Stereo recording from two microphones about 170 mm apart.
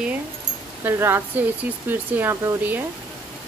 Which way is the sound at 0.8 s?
15° right (ahead or behind).